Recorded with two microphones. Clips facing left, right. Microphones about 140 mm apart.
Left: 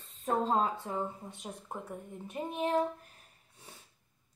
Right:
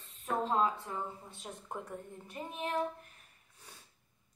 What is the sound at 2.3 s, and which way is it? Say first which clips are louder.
Speech: left 6 dB; 30° left (ahead or behind).